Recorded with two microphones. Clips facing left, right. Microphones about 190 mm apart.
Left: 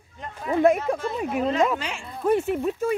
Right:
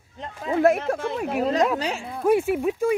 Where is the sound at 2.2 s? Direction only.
10° right (ahead or behind).